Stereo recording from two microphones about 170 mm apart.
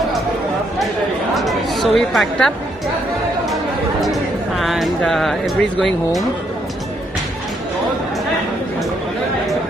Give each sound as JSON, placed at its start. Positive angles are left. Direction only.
{"t": 1.3, "sound": "chatter", "side_deg": 0}
{"t": 4.0, "sound": "speech", "side_deg": 0}